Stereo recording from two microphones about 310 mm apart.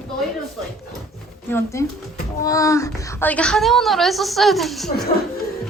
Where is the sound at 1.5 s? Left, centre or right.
Centre.